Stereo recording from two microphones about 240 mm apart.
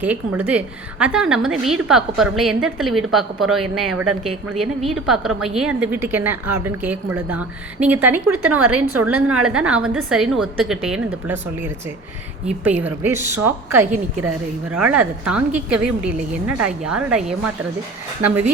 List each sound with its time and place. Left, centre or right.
0.0 s a woman's voice: centre
8.3 s a woman's voice: right
9.0 s a woman's voice: centre